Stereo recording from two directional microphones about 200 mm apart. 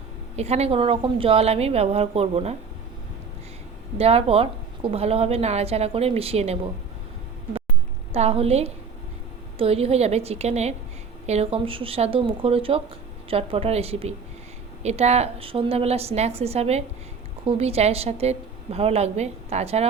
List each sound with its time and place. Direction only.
0.3 s a woman's voice: 30° right (ahead or behind)
3.9 s a woman's voice: 30° right (ahead or behind)
8.1 s a woman's voice: 30° right (ahead or behind)